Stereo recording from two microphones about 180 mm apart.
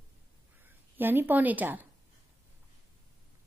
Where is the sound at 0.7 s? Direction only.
10° right (ahead or behind).